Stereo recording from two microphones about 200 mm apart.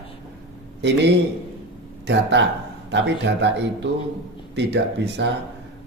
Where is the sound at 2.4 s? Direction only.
60° right (ahead or behind).